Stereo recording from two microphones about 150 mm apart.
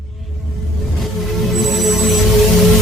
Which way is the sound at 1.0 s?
Centre (ahead or behind).